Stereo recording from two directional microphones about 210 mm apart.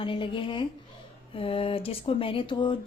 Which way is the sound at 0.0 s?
25° left (ahead or behind).